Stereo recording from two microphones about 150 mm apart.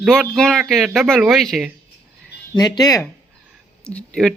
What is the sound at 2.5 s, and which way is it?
Speech, 25° left (ahead or behind).